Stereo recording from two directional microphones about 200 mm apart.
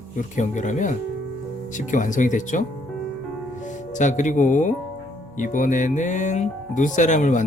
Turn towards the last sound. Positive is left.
turn(degrees=35)  # may be behind; listen again after turning